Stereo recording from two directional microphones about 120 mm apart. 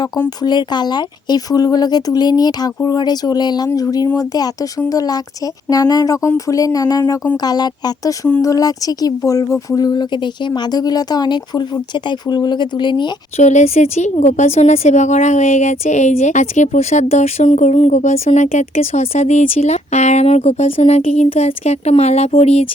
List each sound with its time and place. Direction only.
0.4 s speech: 35° left (ahead or behind)
13.3 s a woman's voice: 80° left; by 22.6 s 60° left (ahead or behind)